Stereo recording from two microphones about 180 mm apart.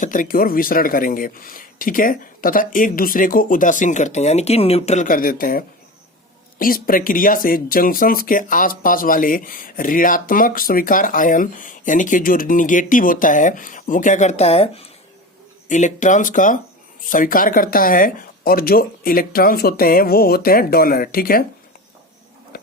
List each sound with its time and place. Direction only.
0.0 s speech: 45° left (ahead or behind)
15.7 s speech: 45° left (ahead or behind)